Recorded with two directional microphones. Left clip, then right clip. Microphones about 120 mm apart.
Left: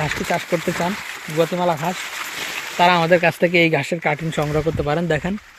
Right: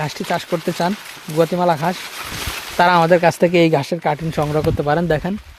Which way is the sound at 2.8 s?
30° right (ahead or behind).